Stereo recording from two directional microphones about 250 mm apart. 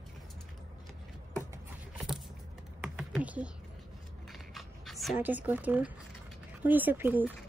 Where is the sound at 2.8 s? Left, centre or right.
Centre.